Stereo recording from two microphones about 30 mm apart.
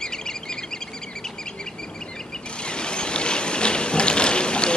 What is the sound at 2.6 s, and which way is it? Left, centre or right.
Vehicle, left.